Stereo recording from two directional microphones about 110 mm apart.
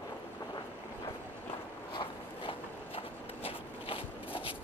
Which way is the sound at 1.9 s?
50° left (ahead or behind).